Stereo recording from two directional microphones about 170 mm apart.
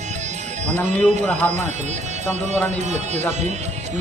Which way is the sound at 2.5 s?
40° right (ahead or behind).